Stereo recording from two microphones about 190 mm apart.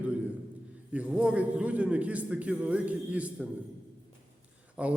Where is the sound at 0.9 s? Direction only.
5° right (ahead or behind).